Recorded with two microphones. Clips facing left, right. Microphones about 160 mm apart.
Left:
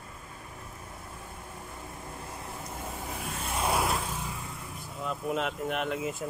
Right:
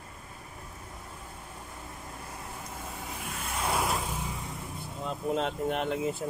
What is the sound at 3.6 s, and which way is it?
Vehicle, 5° left (ahead or behind).